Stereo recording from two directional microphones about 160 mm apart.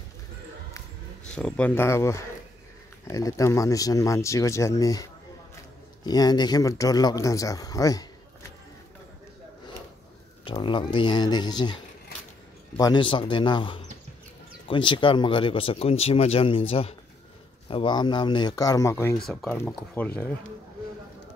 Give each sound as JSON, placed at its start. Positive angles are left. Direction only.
{"t": 1.3, "sound": "speech", "side_deg": 10}
{"t": 6.0, "sound": "speech", "side_deg": 25}
{"t": 10.4, "sound": "speech", "side_deg": 30}
{"t": 19.1, "sound": "speech", "side_deg": 0}